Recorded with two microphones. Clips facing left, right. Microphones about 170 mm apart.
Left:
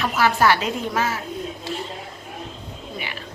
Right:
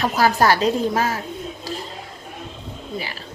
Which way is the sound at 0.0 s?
40° right (ahead or behind).